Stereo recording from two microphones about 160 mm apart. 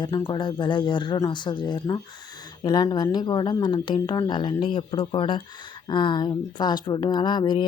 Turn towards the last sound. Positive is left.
turn(degrees=30)  # may be behind; listen again after turning